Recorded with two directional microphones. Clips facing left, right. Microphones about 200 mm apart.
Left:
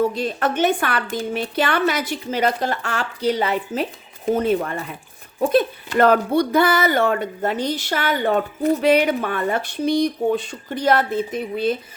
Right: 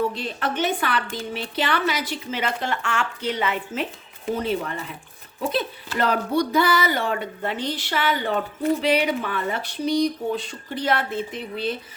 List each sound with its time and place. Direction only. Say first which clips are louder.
0.1 s speech: left 5 dB; 45° left (ahead or behind)
4.3 s speech: left 6 dB; 50° left (ahead or behind)